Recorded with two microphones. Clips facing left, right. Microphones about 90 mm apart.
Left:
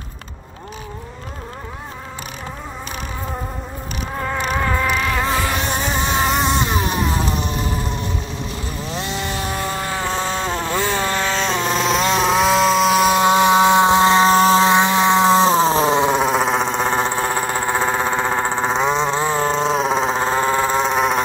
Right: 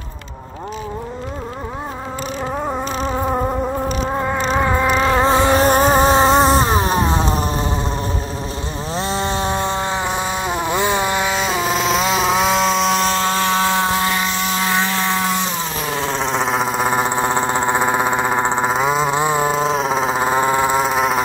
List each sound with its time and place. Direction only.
4.2 s insect: 20° right (ahead or behind)
4.9 s vehicle: 30° right (ahead or behind)
5.7 s a sound: 45° right (ahead or behind)
8.9 s a sound: 35° right (ahead or behind); by 16.2 s 20° left (ahead or behind)
16.2 s vehicle: 5° left (ahead or behind); by 18.7 s 15° right (ahead or behind)
18.7 s vehicle: 5° right (ahead or behind)
20.8 s vehicle: centre (ahead or behind)